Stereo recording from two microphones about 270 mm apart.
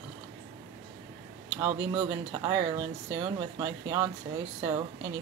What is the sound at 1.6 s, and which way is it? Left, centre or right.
Speech, centre.